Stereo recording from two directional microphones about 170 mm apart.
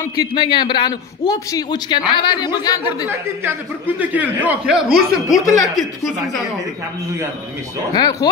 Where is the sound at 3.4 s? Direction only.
10° right (ahead or behind).